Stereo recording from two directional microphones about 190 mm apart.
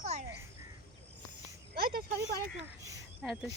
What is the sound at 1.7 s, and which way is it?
Speech, 55° right (ahead or behind).